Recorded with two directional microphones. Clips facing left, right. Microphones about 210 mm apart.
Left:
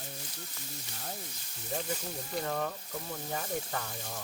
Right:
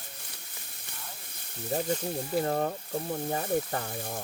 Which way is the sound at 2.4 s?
40° right (ahead or behind).